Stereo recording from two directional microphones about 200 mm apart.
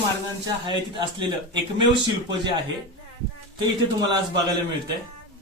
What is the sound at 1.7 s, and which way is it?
Speech, 25° right (ahead or behind).